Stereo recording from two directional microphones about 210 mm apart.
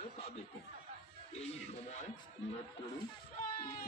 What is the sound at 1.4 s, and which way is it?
Music, 30° left (ahead or behind).